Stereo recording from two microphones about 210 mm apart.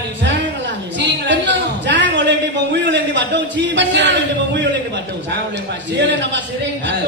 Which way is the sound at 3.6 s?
60° right (ahead or behind).